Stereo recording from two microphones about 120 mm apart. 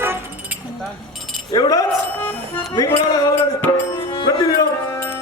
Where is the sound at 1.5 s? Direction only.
30° left (ahead or behind).